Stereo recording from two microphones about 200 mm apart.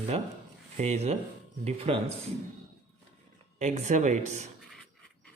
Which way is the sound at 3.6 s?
35° right (ahead or behind).